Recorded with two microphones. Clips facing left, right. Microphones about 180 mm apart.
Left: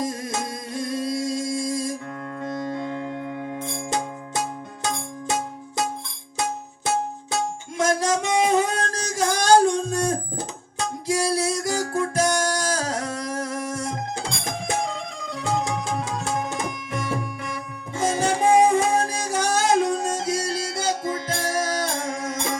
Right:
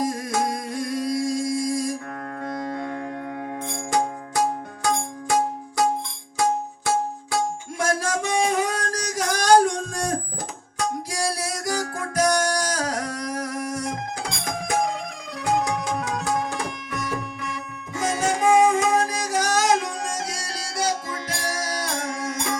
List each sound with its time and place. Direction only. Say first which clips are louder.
0.1 s music: right 4 dB; 25° left (ahead or behind)
7.8 s a sound: left 3 dB; 20° left (ahead or behind)
10.8 s music: left 2 dB; 25° left (ahead or behind)
15.4 s music: right 2 dB; 25° left (ahead or behind)